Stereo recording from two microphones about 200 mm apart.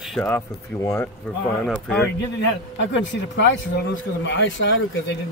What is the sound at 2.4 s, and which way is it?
Speech, 65° left (ahead or behind).